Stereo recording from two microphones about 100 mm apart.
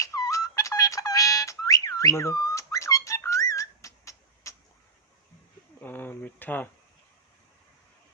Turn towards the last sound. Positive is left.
turn(degrees=15)  # may be behind; listen again after turning